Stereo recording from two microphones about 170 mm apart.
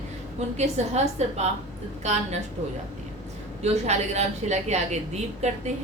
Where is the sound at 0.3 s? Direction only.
40° right (ahead or behind).